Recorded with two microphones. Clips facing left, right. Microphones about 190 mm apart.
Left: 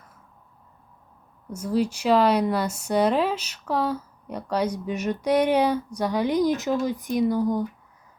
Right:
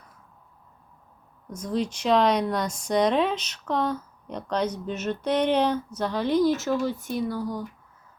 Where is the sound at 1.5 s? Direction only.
10° left (ahead or behind).